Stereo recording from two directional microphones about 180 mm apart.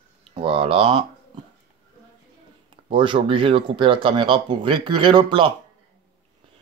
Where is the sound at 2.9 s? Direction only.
30° right (ahead or behind).